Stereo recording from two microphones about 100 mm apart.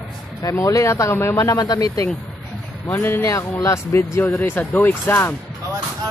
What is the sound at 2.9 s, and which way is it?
Speech, 20° left (ahead or behind).